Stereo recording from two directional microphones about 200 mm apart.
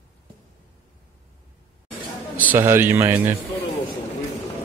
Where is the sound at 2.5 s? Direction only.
10° right (ahead or behind).